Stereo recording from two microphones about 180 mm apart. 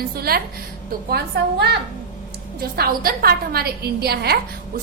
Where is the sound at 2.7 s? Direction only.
55° right (ahead or behind).